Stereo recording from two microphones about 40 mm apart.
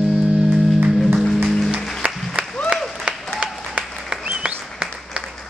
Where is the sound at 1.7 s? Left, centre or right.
Right.